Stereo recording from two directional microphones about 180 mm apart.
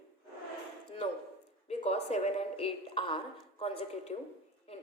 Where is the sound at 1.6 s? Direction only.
35° left (ahead or behind).